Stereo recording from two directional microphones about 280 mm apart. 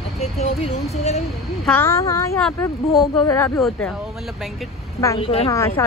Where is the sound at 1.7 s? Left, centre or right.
Centre.